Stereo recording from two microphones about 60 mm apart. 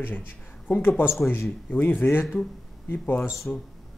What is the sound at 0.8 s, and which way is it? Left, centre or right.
Speech, left.